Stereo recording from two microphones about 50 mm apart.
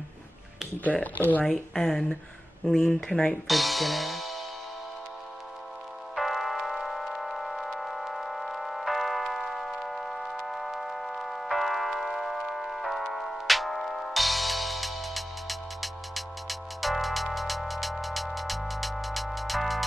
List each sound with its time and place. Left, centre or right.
1.4 s speech: centre
3.1 s speech: centre
3.4 s music: centre
6.1 s music: centre